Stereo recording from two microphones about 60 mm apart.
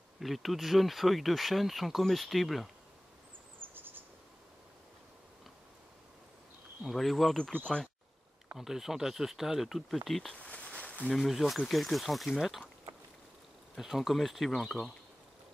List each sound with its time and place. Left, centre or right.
0.2 s speech: centre
3.6 s a sound: right
6.8 s speech: centre
7.5 s speech: centre
8.5 s speech: centre
10.3 s a sound: centre
11.1 s speech: centre
13.7 s speech: centre